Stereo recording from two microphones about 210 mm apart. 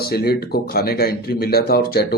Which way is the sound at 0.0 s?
50° left (ahead or behind).